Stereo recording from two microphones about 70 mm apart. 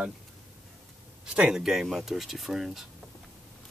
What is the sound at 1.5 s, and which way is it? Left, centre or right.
Speech, centre.